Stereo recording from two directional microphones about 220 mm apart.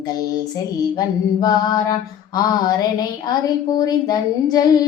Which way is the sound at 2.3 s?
20° left (ahead or behind).